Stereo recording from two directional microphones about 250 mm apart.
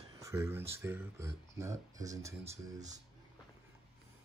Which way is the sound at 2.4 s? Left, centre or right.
Right.